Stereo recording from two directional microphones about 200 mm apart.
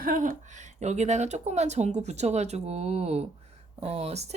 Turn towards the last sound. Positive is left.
turn(degrees=-35)  # may be behind; listen again after turning